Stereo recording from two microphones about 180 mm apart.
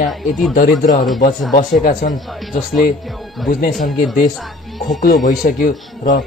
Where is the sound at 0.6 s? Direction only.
50° left (ahead or behind).